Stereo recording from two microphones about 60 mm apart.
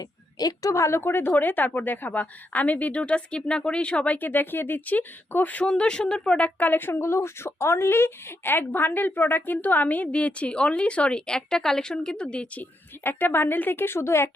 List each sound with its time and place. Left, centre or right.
0.0 s a woman's voice: left
0.7 s speech: left
5.6 s speech: centre
13.0 s a woman's voice: left